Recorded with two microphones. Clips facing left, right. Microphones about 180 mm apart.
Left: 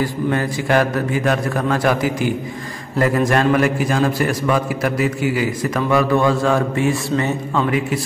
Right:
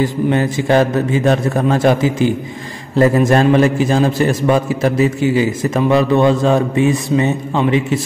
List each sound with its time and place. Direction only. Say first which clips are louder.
0.0 s a man's voice: right 4 dB; 25° right (ahead or behind)